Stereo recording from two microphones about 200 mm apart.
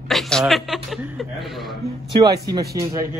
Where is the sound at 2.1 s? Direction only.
20° right (ahead or behind).